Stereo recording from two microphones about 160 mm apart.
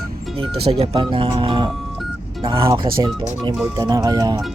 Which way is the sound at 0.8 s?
35° right (ahead or behind).